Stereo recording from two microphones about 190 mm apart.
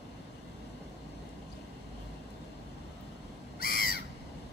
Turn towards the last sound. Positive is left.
turn(degrees=50)  # may be behind; listen again after turning